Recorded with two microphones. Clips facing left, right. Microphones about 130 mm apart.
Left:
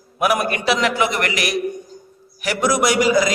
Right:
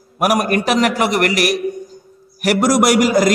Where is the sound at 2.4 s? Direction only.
45° right (ahead or behind).